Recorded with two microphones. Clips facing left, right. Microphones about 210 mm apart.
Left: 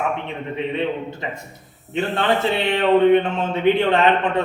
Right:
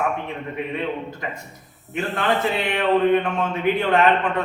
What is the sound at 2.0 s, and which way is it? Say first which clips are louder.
Speech: left 2 dB; 30° left (ahead or behind).